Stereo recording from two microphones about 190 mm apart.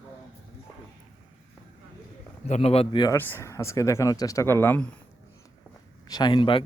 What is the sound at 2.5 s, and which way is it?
Speech, 30° left (ahead or behind).